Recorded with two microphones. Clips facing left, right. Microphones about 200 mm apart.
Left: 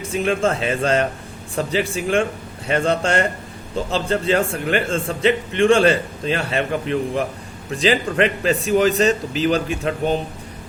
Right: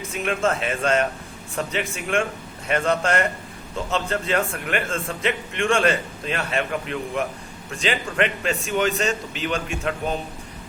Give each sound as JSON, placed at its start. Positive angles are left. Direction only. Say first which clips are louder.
{"t": 0.1, "sound": "a man's voice", "louder": "left 4 dB", "side_deg": 30}